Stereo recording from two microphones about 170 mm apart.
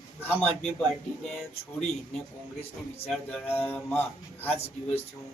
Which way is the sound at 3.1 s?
5° left (ahead or behind).